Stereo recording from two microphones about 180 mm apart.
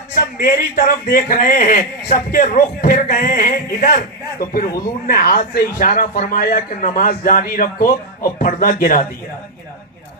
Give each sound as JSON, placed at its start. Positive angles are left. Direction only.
{"t": 0.4, "sound": "a man's voice", "side_deg": 55}